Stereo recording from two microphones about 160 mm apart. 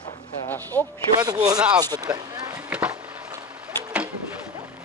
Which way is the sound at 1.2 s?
25° right (ahead or behind).